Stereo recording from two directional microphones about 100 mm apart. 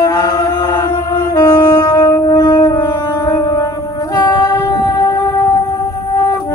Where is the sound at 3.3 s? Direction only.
40° left (ahead or behind).